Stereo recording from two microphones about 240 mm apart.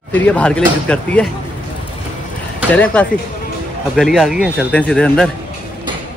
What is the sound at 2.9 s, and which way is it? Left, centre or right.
Speech, centre.